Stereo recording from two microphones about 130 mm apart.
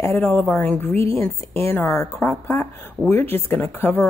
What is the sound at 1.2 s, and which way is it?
A woman's voice, 20° left (ahead or behind).